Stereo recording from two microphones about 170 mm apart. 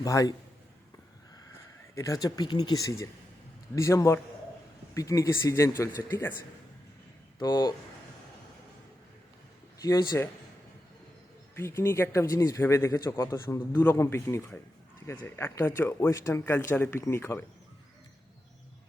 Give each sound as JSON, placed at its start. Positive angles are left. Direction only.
{"t": 0.0, "sound": "speech", "side_deg": 20}
{"t": 2.0, "sound": "speech", "side_deg": 20}
{"t": 7.3, "sound": "speech", "side_deg": 25}
{"t": 9.8, "sound": "speech", "side_deg": 20}
{"t": 11.5, "sound": "speech", "side_deg": 15}